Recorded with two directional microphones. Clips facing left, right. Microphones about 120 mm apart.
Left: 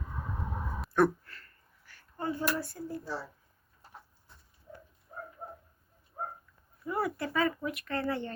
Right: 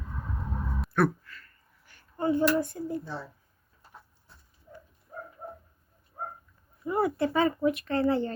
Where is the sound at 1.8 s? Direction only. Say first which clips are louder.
Right 7 dB; 20° right (ahead or behind).